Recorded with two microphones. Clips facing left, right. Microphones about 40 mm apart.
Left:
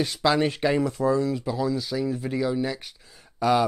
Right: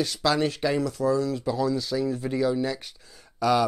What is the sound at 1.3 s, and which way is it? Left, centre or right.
Speech, centre.